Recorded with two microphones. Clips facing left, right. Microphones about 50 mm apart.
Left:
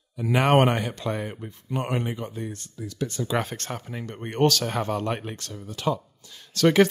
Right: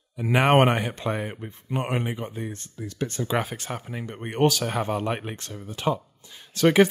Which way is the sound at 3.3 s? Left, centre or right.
Centre.